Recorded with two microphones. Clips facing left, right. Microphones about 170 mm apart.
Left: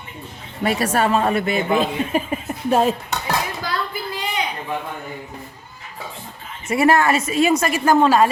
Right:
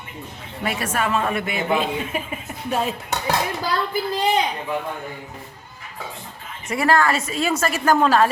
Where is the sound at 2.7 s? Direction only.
45° left (ahead or behind).